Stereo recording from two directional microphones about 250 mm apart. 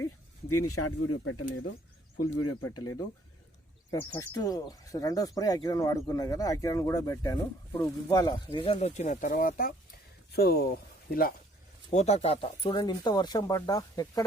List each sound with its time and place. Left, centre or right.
0.4 s speech: left
3.9 s speech: centre